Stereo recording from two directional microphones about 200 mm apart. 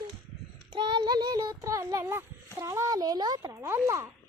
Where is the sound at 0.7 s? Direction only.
25° right (ahead or behind).